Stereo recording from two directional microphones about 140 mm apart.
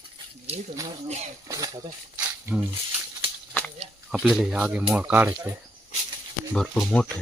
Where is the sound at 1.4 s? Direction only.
25° right (ahead or behind).